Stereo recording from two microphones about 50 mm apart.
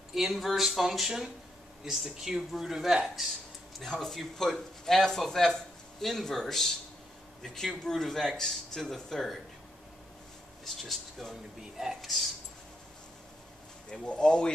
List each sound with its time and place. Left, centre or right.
0.1 s speech: centre
10.6 s speech: centre
13.8 s speech: centre